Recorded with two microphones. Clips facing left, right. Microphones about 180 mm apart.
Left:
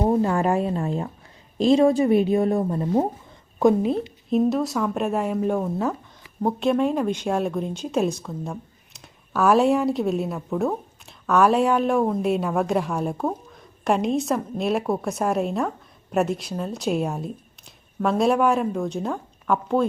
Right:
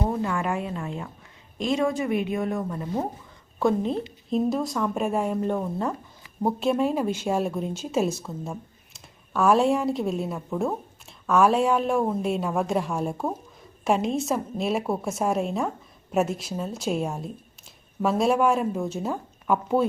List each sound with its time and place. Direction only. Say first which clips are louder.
0.0 s a sound: left 6 dB; 35° left (ahead or behind)
1.5 s speech: left 8 dB; 35° left (ahead or behind)
3.6 s a woman's voice: left 5 dB; 15° left (ahead or behind)
3.9 s speech: left 4 dB; centre (ahead or behind)